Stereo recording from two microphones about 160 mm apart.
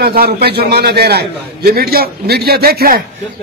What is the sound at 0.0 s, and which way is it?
A man's voice, 75° right (ahead or behind).